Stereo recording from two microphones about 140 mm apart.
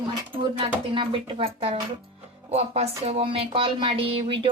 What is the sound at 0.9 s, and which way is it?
A woman's voice, 40° right (ahead or behind).